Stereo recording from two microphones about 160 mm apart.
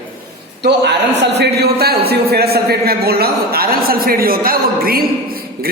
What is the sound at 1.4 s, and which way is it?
A man's voice, 80° right.